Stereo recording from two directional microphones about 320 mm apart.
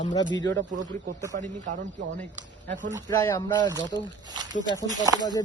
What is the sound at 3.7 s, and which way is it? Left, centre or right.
Speech, centre.